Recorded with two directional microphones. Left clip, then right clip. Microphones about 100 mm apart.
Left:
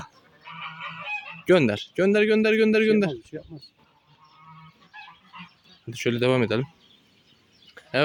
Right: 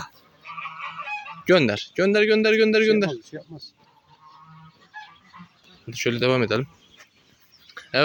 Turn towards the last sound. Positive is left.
turn(degrees=60)  # may be behind; listen again after turning